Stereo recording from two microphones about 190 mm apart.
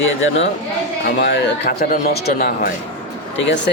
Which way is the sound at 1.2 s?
60° left (ahead or behind).